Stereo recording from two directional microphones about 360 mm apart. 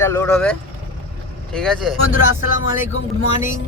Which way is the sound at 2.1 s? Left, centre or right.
Left.